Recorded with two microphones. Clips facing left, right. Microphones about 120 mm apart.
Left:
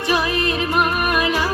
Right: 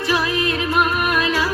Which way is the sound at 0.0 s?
20° left (ahead or behind).